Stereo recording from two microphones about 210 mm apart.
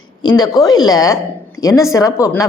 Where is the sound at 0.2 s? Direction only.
20° left (ahead or behind).